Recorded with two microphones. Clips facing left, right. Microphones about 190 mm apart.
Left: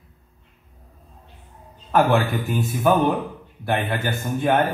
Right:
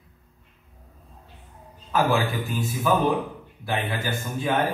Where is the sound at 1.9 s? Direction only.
60° left (ahead or behind).